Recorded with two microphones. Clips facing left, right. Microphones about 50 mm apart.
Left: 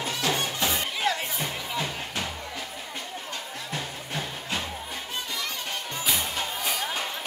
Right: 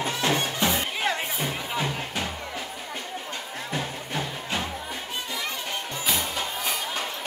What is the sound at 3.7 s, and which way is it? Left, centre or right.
Music, centre.